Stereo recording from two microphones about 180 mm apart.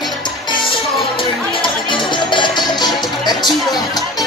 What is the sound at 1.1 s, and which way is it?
Music, 25° left (ahead or behind).